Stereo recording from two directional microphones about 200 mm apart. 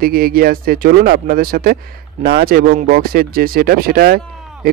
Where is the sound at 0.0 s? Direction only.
50° right (ahead or behind).